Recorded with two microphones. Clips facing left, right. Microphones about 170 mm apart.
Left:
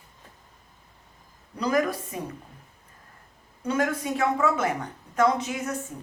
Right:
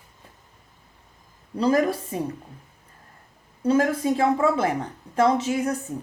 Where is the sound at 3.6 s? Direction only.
30° right (ahead or behind).